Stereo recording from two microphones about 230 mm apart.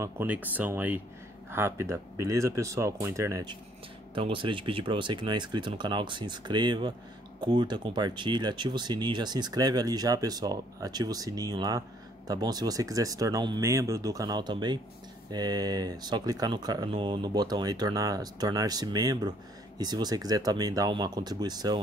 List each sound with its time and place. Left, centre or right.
0.0 s speech: centre